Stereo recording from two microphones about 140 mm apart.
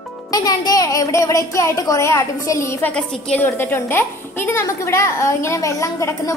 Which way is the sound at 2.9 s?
5° left (ahead or behind).